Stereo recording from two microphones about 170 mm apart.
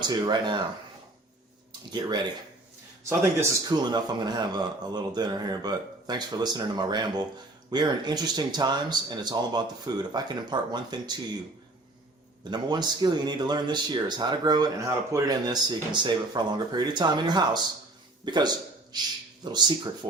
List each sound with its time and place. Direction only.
0.0 s speech: 25° right (ahead or behind)
1.9 s speech: 25° right (ahead or behind)
12.5 s speech: 25° right (ahead or behind)